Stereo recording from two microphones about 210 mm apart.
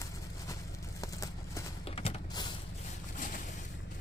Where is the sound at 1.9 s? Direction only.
30° left (ahead or behind).